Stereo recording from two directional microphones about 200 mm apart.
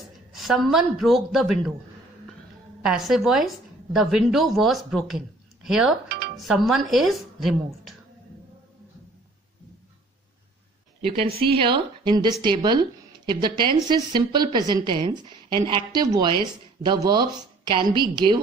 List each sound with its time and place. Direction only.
0.3 s speech: centre (ahead or behind)
2.8 s a woman's voice: centre (ahead or behind)
6.0 s music: 50° right (ahead or behind)
6.3 s speech: centre (ahead or behind)
11.0 s a woman's voice: 30° right (ahead or behind)